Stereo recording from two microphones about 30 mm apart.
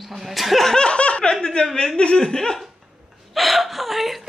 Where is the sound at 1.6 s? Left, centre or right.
Centre.